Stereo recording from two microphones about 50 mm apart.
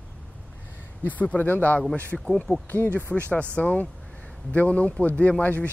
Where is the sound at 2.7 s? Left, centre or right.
Left.